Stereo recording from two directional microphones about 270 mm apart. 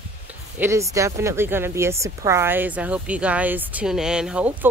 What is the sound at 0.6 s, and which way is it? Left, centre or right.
Speech, centre.